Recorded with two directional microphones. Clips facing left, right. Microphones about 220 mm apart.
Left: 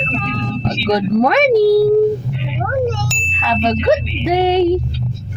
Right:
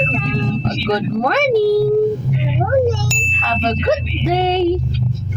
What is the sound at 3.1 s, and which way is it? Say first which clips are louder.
Ding: right 3 dB; centre (ahead or behind).